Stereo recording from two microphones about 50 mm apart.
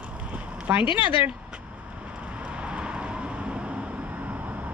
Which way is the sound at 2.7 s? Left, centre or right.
Right.